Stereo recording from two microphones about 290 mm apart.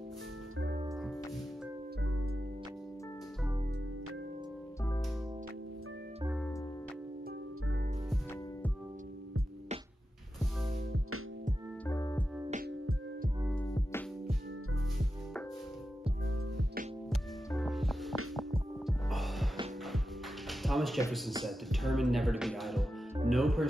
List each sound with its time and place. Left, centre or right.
11.8 s music: centre
12.4 s music: right
13.4 s music: centre
13.7 s music: centre
17.1 s music: centre
20.4 s a sound: centre
21.5 s speech: centre